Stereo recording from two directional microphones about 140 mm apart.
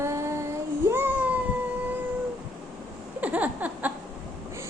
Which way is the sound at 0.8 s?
15° right (ahead or behind).